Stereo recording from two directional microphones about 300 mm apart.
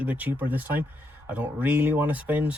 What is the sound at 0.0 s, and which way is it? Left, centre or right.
Speech, centre.